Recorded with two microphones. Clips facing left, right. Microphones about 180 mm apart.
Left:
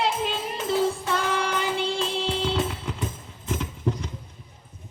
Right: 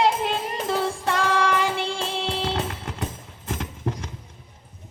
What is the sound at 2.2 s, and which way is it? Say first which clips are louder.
Music: even; 75° right (ahead or behind).